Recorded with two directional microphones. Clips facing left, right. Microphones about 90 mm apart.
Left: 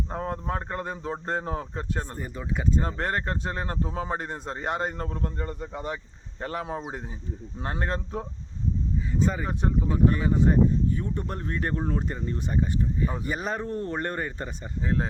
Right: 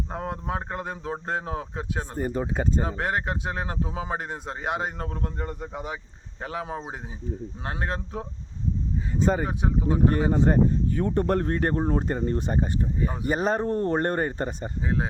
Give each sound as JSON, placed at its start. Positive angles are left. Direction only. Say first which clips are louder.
{"t": 0.1, "sound": "a man's voice", "louder": "left 1 dB", "side_deg": -5}
{"t": 2.1, "sound": "speech", "louder": "right 6 dB", "side_deg": -50}
{"t": 2.8, "sound": "a man's voice", "louder": "right 1 dB", "side_deg": -5}
{"t": 9.5, "sound": "a man's voice", "louder": "even", "side_deg": -5}
{"t": 10.2, "sound": "speech", "louder": "right 3 dB", "side_deg": -30}
{"t": 10.5, "sound": "speech", "louder": "even", "side_deg": -70}
{"t": 11.8, "sound": "speech", "louder": "right 4 dB", "side_deg": -30}
{"t": 12.0, "sound": "speech", "louder": "right 5 dB", "side_deg": -50}